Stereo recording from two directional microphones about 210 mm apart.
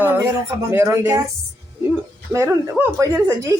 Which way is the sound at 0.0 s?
10° right (ahead or behind).